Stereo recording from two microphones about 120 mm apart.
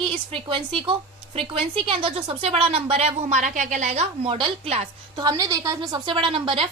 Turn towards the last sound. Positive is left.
turn(degrees=-45)  # may be behind; listen again after turning